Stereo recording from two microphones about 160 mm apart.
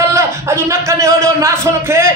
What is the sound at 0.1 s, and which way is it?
Speech, 15° right (ahead or behind).